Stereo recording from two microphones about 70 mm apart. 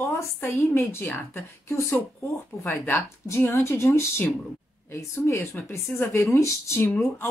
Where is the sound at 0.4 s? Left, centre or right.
Left.